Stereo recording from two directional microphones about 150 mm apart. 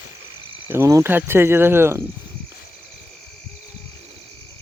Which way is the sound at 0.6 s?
15° right (ahead or behind).